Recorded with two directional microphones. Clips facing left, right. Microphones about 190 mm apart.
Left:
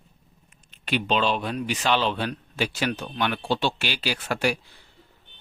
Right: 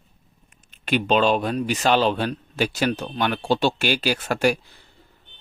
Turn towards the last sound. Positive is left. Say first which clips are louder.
# right 5 dB
turn(degrees=-45)  # may be behind; listen again after turning